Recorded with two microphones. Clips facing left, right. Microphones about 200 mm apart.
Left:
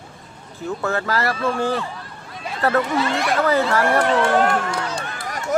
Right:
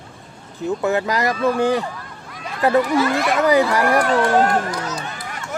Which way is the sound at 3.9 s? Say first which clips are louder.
Right 1 dB; 25° left (ahead or behind).